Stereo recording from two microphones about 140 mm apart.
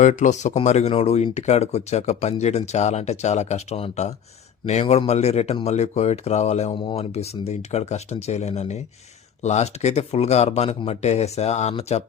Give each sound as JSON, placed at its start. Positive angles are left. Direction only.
{"t": 0.0, "sound": "speech", "side_deg": 60}
{"t": 6.7, "sound": "speech", "side_deg": 40}